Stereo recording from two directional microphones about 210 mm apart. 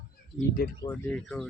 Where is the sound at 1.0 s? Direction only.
5° left (ahead or behind).